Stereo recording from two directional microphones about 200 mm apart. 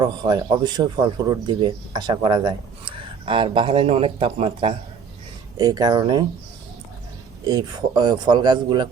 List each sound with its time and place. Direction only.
0.0 s speech: 20° right (ahead or behind)
7.4 s speech: 20° right (ahead or behind)